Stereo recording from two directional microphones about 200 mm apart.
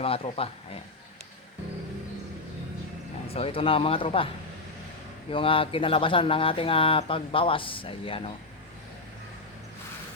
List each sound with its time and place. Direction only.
0.0 s speech: 30° left (ahead or behind)
3.2 s speech: 30° left (ahead or behind)
5.3 s speech: 25° left (ahead or behind)